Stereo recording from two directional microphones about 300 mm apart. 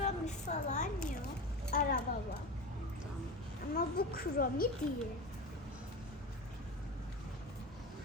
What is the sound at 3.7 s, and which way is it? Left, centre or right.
Speech, left.